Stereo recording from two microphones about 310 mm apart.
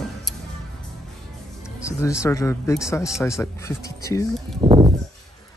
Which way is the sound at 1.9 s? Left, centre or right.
Centre.